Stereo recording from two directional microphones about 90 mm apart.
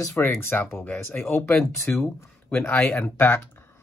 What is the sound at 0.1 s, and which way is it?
Speech, 25° left (ahead or behind).